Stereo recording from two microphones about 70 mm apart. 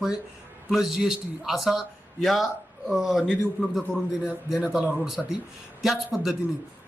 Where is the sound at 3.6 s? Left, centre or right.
Centre.